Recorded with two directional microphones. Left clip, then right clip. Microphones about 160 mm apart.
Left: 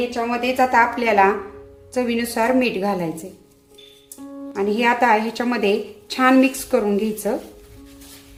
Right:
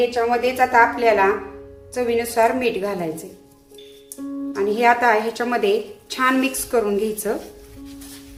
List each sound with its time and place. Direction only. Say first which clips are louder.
0.1 s a woman's voice: right 3 dB; 30° left (ahead or behind)
4.5 s a woman's voice: right 2 dB; 30° left (ahead or behind)